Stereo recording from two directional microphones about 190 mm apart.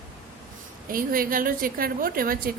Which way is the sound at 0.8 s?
50° right (ahead or behind).